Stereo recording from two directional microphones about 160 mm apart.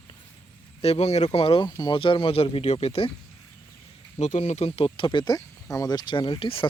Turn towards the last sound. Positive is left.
turn(degrees=35)  # may be behind; listen again after turning